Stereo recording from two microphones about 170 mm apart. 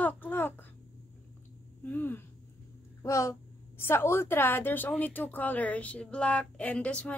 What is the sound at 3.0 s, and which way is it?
Speech, 20° left (ahead or behind).